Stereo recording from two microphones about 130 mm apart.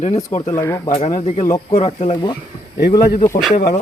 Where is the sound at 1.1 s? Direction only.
70° left (ahead or behind).